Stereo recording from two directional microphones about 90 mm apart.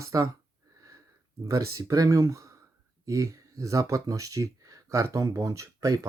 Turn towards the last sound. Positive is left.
turn(degrees=-35)  # may be behind; listen again after turning